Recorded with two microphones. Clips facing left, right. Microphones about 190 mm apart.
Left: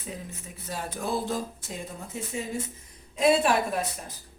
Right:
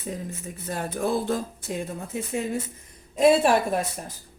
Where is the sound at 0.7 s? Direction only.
55° right (ahead or behind).